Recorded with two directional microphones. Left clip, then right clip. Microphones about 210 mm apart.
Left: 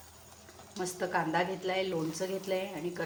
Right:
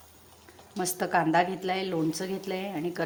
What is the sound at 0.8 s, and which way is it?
A woman's voice, 45° right (ahead or behind).